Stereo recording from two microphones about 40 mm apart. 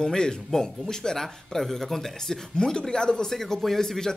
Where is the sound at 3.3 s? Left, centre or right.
Centre.